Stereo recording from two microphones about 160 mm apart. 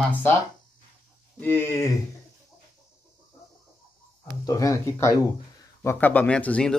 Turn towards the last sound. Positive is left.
turn(degrees=5)  # may be behind; listen again after turning